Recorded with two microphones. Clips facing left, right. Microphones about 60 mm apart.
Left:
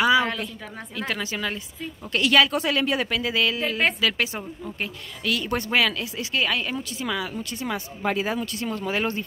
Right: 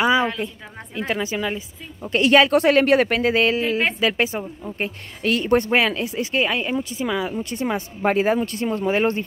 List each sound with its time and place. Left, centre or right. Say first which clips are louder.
0.0 s a sound: right 1 dB; right
0.9 s speech: right 5 dB; right
2.0 s speech: right 4 dB; right
2.5 s speech: right 8 dB; right
3.6 s speech: right 2 dB; centre
4.1 s speech: right 5 dB; right